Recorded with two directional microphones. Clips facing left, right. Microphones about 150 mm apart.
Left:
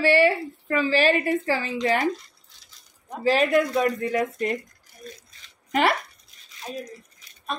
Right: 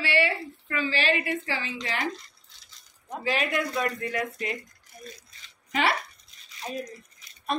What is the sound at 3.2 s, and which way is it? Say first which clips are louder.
A woman's voice: left 8 dB; 40° left (ahead or behind).